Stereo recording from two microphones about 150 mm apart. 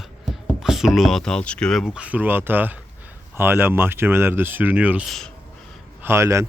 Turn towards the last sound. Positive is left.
turn(degrees=-20)  # may be behind; listen again after turning